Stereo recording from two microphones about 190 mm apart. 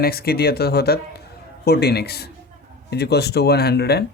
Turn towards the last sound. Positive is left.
turn(degrees=55)  # may be behind; listen again after turning